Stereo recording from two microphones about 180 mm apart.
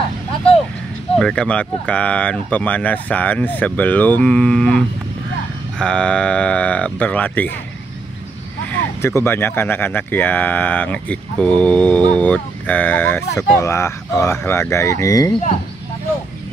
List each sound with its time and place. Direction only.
1.1 s speech: 5° left (ahead or behind)
9.0 s speech: 15° left (ahead or behind)